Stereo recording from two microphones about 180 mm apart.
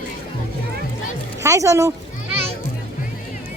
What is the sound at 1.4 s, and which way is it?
Speech, 15° right (ahead or behind).